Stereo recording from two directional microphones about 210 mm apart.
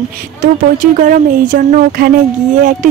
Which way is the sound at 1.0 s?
40° right (ahead or behind).